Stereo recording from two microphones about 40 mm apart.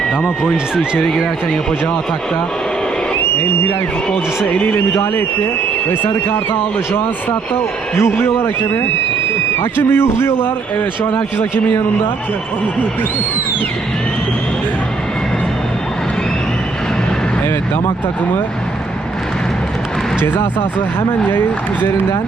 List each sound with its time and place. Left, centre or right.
0.4 s speech: right
5.9 s a man's voice: left
7.9 s a man's voice: left
9.6 s a man's voice: left
21.3 s speech: left